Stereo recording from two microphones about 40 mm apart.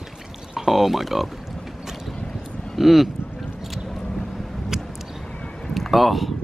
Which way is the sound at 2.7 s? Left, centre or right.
Centre.